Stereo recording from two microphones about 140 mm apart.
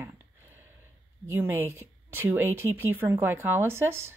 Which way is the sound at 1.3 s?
20° right (ahead or behind).